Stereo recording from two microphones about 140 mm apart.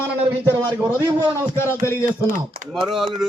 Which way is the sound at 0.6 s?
30° right (ahead or behind).